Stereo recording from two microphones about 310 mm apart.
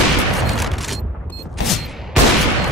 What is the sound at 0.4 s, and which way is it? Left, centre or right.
Fusillade, centre.